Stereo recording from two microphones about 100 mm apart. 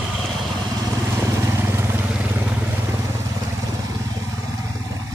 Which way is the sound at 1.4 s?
25° right (ahead or behind).